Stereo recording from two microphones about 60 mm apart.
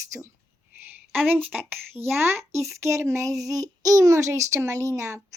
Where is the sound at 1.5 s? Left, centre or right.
Right.